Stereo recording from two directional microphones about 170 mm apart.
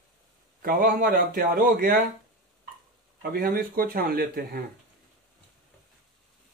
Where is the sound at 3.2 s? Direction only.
60° right (ahead or behind).